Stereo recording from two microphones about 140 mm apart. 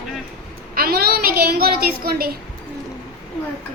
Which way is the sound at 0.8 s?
90° right.